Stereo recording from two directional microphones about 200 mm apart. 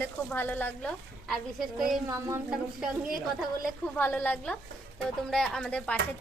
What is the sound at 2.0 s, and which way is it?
Speech, 15° right (ahead or behind).